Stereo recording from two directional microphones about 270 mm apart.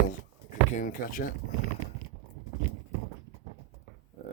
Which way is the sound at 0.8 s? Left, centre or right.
Left.